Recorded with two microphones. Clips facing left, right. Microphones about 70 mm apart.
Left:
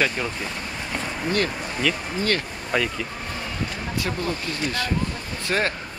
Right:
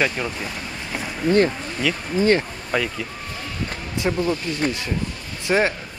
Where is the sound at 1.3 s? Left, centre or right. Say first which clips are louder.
Right 8 dB; centre.